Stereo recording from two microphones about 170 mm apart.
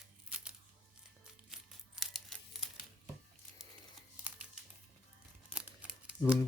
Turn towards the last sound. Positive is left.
turn(degrees=-5)  # may be behind; listen again after turning